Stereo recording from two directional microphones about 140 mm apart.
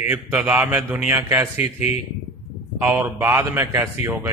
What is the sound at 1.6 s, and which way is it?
Speech, 50° left (ahead or behind).